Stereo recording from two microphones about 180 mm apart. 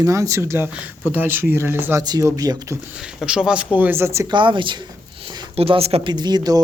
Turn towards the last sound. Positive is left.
turn(degrees=-20)  # may be behind; listen again after turning